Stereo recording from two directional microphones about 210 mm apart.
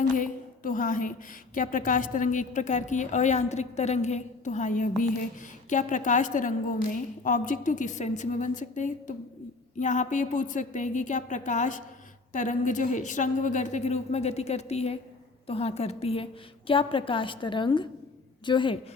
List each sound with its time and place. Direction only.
0.1 s a woman's voice: 40° left (ahead or behind); by 18.8 s 25° left (ahead or behind)